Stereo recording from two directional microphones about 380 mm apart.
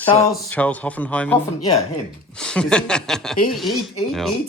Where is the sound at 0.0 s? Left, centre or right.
Centre.